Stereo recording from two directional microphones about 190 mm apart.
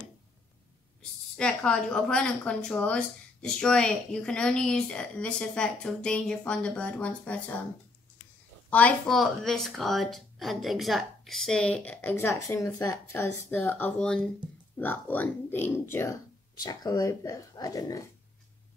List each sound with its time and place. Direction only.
1.3 s speech: 5° left (ahead or behind)
8.6 s speech: 5° left (ahead or behind)